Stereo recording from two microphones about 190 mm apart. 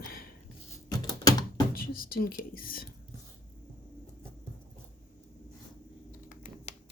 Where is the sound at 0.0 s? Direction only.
50° left (ahead or behind).